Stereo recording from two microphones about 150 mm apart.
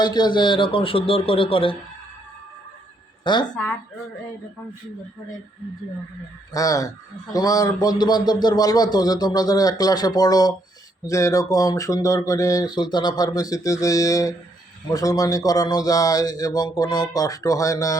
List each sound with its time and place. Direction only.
0.0 s speech: 30° left (ahead or behind)
3.5 s speech: 10° left (ahead or behind)
6.5 s speech: 20° left (ahead or behind)